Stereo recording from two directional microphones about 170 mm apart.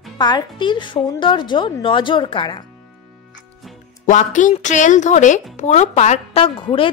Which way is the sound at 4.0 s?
50° left (ahead or behind).